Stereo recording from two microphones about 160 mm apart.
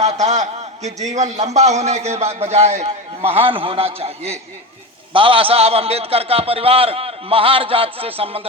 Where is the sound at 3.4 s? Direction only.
35° right (ahead or behind).